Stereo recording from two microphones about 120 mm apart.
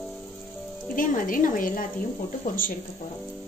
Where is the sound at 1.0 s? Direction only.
90° left.